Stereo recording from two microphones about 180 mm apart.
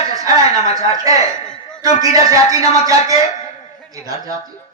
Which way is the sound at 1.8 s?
20° right (ahead or behind).